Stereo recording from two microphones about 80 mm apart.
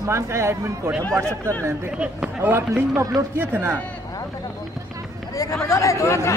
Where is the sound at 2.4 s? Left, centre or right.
Right.